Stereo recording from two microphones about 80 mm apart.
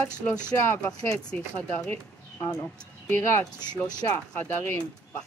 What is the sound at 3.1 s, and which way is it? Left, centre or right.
A woman's voice, left.